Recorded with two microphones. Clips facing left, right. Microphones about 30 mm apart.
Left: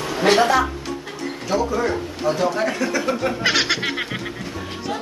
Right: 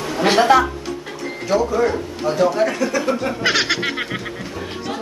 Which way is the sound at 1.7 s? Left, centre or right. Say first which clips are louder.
Right 3 dB; centre.